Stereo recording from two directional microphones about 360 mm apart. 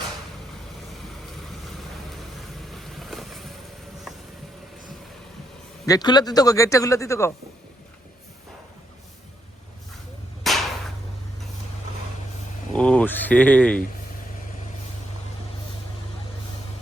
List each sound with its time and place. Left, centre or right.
2.7 s vehicle: centre
5.8 s speech: centre
10.4 s whip: centre
12.7 s a sound: centre